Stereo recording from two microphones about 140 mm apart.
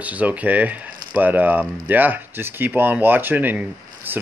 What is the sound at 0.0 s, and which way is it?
Speech, 10° right (ahead or behind).